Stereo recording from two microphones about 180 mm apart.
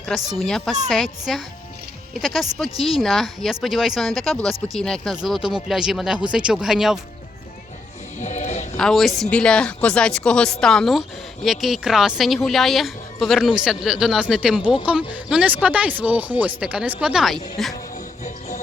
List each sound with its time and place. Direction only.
0.3 s speech: centre (ahead or behind)
8.2 s music: 40° left (ahead or behind)
8.8 s speech: centre (ahead or behind)
18.2 s music: 40° left (ahead or behind)